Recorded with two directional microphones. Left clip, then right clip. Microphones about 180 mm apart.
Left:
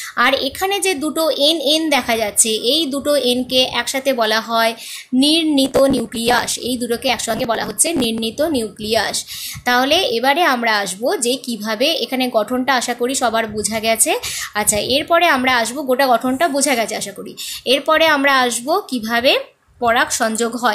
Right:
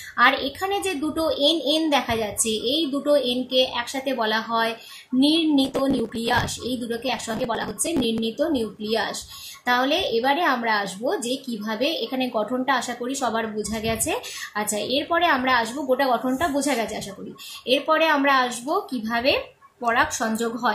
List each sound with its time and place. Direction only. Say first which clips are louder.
0.2 s a woman's voice: left 3 dB; 50° left (ahead or behind)